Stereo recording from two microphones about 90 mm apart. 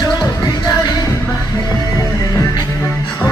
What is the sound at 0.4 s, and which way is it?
Music, 45° left (ahead or behind).